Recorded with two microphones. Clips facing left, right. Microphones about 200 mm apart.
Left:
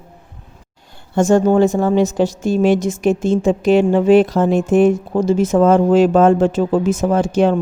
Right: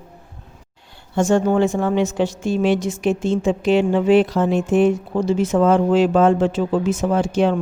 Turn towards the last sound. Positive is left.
turn(degrees=45)  # may be behind; listen again after turning